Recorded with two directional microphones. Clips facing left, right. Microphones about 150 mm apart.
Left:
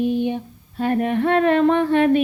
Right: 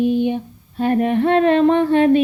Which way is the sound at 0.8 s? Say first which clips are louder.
Right 3 dB; 25° right (ahead or behind).